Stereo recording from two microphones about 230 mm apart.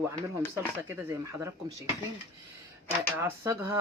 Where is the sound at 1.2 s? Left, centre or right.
Centre.